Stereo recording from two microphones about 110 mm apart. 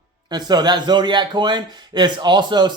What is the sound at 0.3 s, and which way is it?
A man's voice, 40° right (ahead or behind).